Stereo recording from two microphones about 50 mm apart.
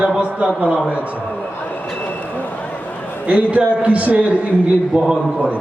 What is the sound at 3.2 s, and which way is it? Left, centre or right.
A man's voice, right.